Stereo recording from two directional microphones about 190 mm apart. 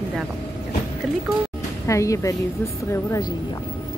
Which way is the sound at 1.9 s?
15° left (ahead or behind).